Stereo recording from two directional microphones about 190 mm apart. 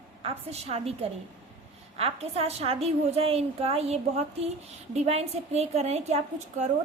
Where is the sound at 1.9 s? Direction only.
30° right (ahead or behind).